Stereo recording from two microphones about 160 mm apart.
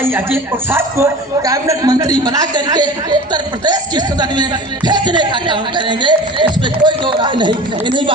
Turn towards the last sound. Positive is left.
turn(degrees=-30)  # may be behind; listen again after turning